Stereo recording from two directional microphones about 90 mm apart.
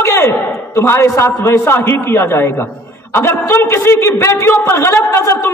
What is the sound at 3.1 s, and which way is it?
A man's voice, 25° left (ahead or behind).